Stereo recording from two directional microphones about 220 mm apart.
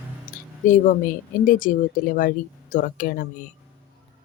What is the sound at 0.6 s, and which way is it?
Speech, 35° left (ahead or behind).